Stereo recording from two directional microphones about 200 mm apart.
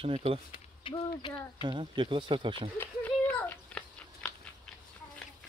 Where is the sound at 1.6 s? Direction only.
25° right (ahead or behind).